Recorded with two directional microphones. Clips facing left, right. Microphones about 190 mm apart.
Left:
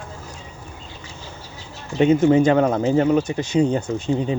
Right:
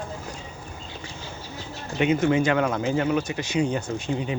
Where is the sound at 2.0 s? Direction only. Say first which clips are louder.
Left 6 dB; 35° left (ahead or behind).